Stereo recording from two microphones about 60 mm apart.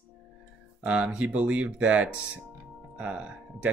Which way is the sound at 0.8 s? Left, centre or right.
Right.